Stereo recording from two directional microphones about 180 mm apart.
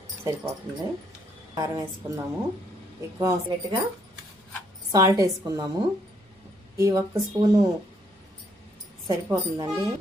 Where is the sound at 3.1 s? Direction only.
20° right (ahead or behind).